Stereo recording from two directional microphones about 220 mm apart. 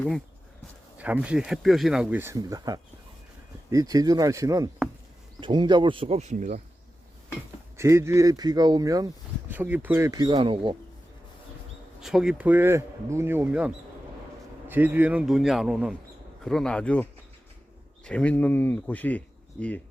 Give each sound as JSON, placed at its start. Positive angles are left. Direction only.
{"t": 0.9, "sound": "speech", "side_deg": -5}
{"t": 7.8, "sound": "speech", "side_deg": -10}
{"t": 11.9, "sound": "speech", "side_deg": 0}